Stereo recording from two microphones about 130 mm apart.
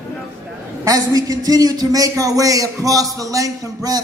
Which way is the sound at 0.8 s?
25° right (ahead or behind).